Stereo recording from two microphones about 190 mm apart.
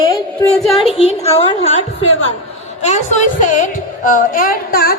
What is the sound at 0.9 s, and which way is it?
A woman's voice, 35° left (ahead or behind).